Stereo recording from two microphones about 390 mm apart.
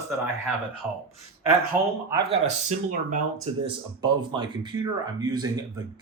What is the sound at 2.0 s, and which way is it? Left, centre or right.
Speech, centre.